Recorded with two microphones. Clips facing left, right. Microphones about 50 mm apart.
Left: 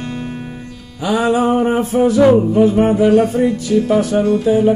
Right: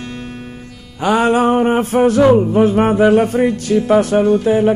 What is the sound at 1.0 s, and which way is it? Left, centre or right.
Music, right.